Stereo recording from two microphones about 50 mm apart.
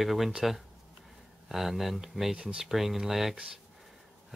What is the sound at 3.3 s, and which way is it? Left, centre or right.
Speech, centre.